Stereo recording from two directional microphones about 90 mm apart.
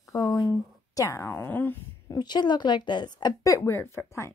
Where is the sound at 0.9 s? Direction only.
35° left (ahead or behind).